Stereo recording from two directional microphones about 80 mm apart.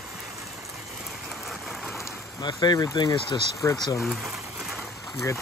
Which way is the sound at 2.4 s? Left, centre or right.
Left.